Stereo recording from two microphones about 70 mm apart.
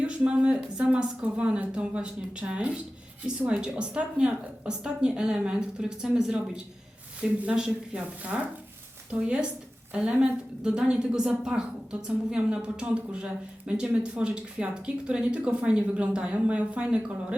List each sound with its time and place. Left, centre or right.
0.0 s a woman's voice: centre